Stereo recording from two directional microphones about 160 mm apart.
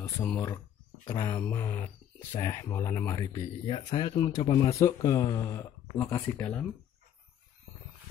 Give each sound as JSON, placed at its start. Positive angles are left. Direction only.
{"t": 0.0, "sound": "speech", "side_deg": 15}
{"t": 3.6, "sound": "speech", "side_deg": 30}
{"t": 4.7, "sound": "speech", "side_deg": 20}